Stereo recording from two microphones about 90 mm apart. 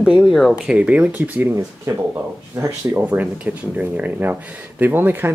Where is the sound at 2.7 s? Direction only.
20° right (ahead or behind).